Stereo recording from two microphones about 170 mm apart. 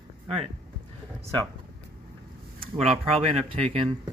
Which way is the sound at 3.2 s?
35° right (ahead or behind).